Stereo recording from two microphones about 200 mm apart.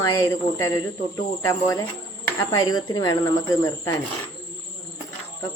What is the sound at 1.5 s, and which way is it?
Speech, 15° left (ahead or behind).